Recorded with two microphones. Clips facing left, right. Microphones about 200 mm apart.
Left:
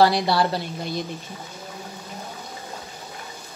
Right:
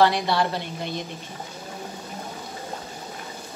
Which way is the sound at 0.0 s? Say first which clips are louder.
Left 2 dB; 35° left (ahead or behind).